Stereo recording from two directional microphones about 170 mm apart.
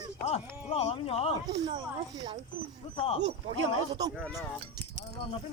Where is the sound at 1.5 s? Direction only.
25° right (ahead or behind).